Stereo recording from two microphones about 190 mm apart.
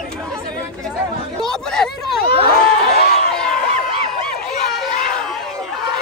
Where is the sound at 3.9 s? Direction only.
30° right (ahead or behind).